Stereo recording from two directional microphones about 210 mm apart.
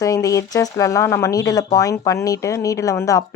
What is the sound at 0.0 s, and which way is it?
Speech, 15° left (ahead or behind).